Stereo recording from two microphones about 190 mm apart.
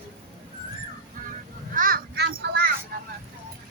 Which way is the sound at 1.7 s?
45° right (ahead or behind).